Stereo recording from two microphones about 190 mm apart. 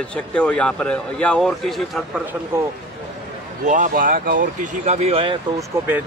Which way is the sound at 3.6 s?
40° right (ahead or behind).